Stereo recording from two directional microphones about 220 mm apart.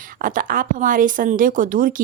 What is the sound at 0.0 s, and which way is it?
Speech, 40° right (ahead or behind).